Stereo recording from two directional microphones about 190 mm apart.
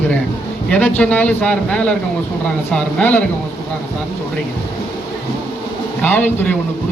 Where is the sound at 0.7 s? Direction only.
10° left (ahead or behind).